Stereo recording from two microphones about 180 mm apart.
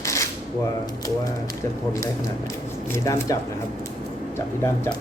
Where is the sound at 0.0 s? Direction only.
15° left (ahead or behind).